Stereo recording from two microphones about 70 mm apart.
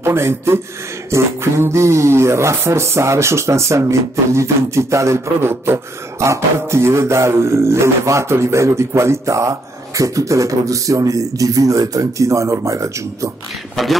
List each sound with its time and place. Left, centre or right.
0.0 s a man's voice: right
13.8 s speech: centre